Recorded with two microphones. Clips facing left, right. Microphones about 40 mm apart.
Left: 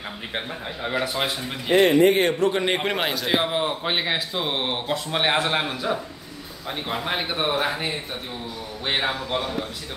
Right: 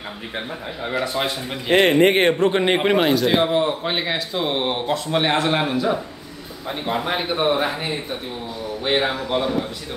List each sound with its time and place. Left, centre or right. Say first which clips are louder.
0.8 s a man's voice: right 2 dB; centre
1.7 s speech: right 2 dB; right
2.3 s a man's voice: right 3 dB; right
2.7 s speech: right 6 dB; centre
3.0 s a man's voice: right 6 dB; centre
7.1 s a man's voice: right 4 dB; centre